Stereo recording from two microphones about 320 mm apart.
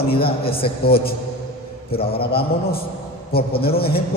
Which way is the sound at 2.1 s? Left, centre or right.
Left.